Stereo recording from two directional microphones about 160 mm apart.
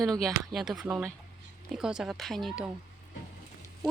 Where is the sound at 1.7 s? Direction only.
5° right (ahead or behind).